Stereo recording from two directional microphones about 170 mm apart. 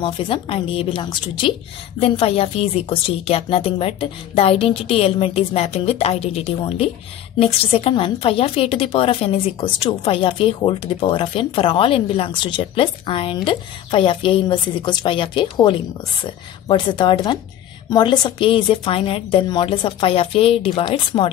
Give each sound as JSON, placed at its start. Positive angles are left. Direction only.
{"t": 0.0, "sound": "a woman's voice", "side_deg": 30}